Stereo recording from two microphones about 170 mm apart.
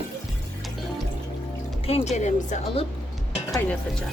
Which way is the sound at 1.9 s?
40° left (ahead or behind).